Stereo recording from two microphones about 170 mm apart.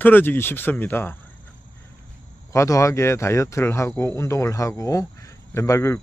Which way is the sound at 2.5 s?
20° left (ahead or behind).